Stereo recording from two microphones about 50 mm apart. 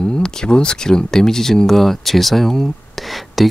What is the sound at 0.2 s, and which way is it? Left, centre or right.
Speech, centre.